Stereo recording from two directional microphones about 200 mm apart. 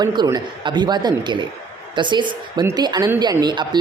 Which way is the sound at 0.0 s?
20° right (ahead or behind).